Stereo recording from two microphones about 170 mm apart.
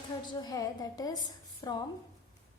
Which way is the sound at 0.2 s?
25° left (ahead or behind).